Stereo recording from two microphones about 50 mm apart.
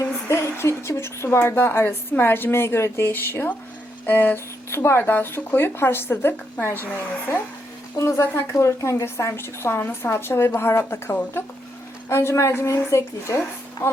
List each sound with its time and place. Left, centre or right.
0.3 s a sound: left
0.5 s a woman's voice: left
3.0 s a woman's voice: left
4.7 s a woman's voice: left
4.9 s a woman's voice: left
7.9 s a woman's voice: left
9.0 s a woman's voice: left